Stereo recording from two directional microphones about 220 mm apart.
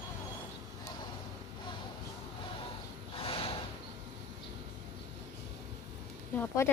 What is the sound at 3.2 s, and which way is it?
Snort, 25° left (ahead or behind).